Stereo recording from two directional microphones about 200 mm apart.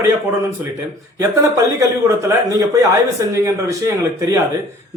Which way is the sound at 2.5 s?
15° right (ahead or behind).